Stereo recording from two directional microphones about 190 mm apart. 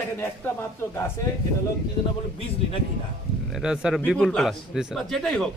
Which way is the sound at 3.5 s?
5° right (ahead or behind).